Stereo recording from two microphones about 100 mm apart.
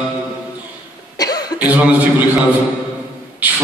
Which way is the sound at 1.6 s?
15° right (ahead or behind).